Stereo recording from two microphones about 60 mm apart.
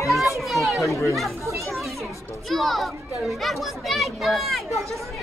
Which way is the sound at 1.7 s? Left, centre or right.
Centre.